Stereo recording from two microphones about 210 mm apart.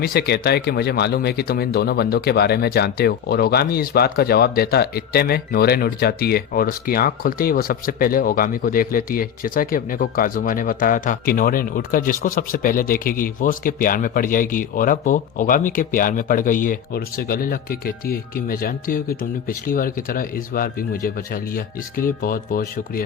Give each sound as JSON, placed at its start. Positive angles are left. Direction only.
{"t": 0.0, "sound": "speech", "side_deg": 50}